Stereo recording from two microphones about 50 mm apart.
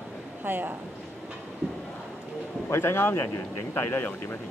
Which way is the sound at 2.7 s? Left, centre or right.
Left.